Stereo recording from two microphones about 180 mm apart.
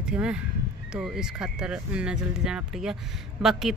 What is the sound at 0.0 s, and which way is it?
Speech, 5° right (ahead or behind).